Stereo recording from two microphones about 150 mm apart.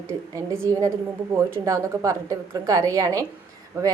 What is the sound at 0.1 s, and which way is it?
A woman's voice, 15° right (ahead or behind).